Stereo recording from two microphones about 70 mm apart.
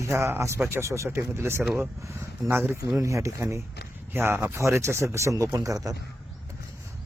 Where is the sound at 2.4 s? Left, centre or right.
Right.